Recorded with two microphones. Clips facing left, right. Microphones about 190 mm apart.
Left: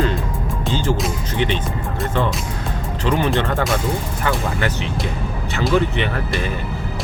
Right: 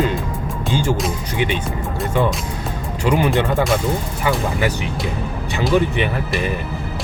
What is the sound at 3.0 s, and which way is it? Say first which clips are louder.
Speech: right 2 dB; 15° right (ahead or behind).